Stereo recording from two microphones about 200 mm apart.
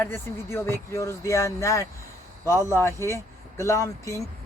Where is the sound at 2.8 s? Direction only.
15° left (ahead or behind).